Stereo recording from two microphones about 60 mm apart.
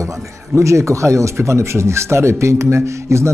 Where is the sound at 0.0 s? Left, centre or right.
Right.